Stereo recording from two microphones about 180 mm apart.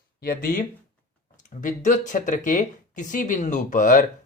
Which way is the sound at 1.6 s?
45° left (ahead or behind).